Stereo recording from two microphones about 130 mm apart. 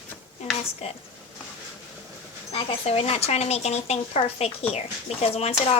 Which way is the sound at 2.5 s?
45° left (ahead or behind).